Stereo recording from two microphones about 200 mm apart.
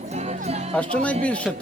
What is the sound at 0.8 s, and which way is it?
Speech, 5° left (ahead or behind).